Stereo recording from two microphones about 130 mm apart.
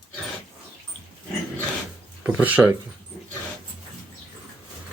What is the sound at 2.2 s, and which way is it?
Speech, 10° right (ahead or behind).